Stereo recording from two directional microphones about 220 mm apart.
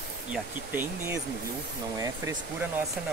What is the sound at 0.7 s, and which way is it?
Speech, 10° right (ahead or behind).